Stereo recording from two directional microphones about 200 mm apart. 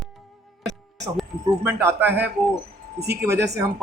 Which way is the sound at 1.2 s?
10° right (ahead or behind).